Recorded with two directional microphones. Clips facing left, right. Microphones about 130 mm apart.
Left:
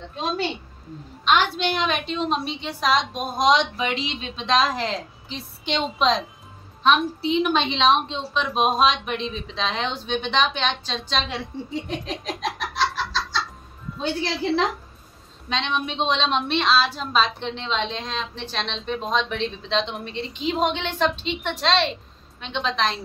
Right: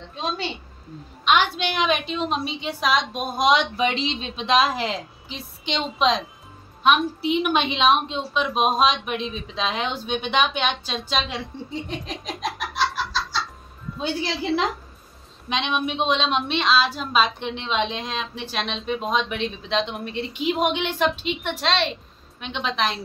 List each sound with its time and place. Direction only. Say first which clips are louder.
1.2 s speech: even; centre (ahead or behind)
3.7 s a woman's voice: right 3 dB; 20° right (ahead or behind)
4.5 s speech: right 1 dB; 10° right (ahead or behind)
7.3 s speech: left 1 dB; 10° right (ahead or behind)
14.4 s a woman's voice: left 2 dB; 5° right (ahead or behind)